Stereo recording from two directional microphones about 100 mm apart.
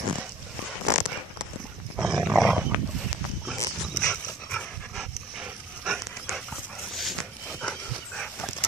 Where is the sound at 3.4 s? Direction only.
5° left (ahead or behind).